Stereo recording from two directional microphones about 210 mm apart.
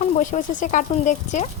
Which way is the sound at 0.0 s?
35° left (ahead or behind).